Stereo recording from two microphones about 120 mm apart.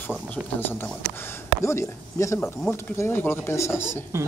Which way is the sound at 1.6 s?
25° left (ahead or behind).